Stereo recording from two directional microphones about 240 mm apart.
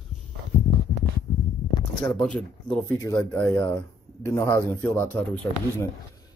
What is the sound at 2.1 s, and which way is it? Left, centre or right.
Speech, centre.